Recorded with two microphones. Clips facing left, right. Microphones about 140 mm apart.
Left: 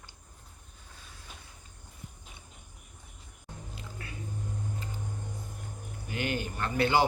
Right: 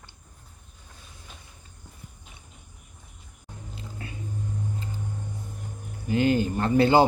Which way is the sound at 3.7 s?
25° right (ahead or behind).